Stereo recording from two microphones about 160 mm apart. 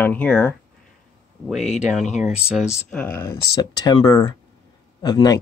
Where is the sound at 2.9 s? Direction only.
10° left (ahead or behind).